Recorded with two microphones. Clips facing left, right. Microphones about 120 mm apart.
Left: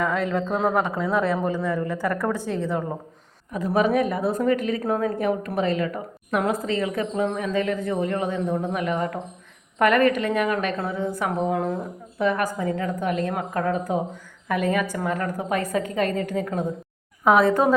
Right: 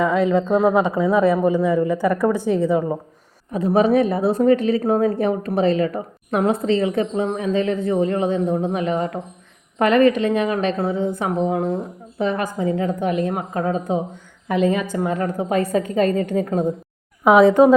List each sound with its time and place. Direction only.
0.0 s speech: 10° right (ahead or behind)
3.5 s a woman's voice: 30° right (ahead or behind)
17.4 s speech: 15° right (ahead or behind)